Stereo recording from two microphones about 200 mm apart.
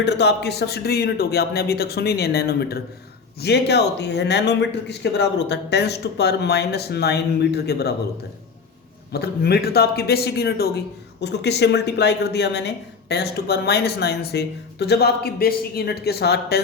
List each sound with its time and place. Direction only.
0.0 s speech: 60° left (ahead or behind)
9.1 s speech: 50° left (ahead or behind)